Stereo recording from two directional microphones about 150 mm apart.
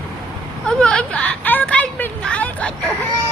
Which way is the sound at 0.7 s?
5° left (ahead or behind).